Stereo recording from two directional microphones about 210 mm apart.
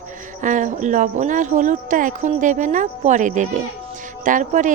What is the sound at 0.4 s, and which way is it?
Speech, 35° right (ahead or behind).